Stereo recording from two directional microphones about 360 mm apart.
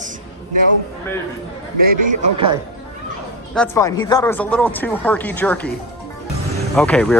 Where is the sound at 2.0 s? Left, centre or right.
Centre.